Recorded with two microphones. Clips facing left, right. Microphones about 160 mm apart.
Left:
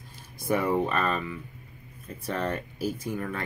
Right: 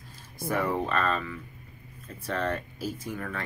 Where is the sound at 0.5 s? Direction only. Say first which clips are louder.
Left 3 dB; 15° left (ahead or behind).